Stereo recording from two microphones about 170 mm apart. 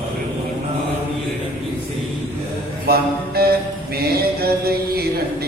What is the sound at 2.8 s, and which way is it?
Mantra, 65° right (ahead or behind).